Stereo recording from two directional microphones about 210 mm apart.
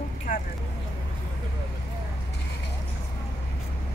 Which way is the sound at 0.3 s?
40° left (ahead or behind).